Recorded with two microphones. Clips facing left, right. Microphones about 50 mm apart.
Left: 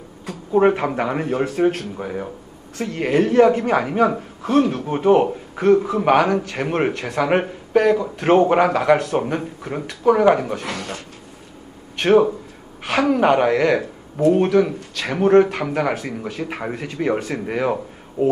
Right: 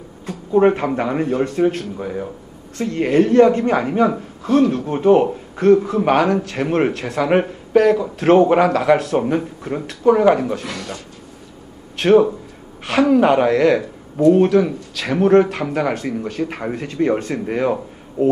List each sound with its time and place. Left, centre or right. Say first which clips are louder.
0.3 s a man's voice: right 2 dB; centre
2.8 s a man's voice: right 3 dB; centre
10.7 s a man's voice: left 1 dB; left
12.0 s a man's voice: right 2 dB; centre